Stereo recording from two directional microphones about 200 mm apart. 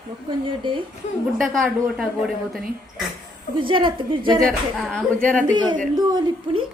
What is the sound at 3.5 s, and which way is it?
Speech, 25° right (ahead or behind).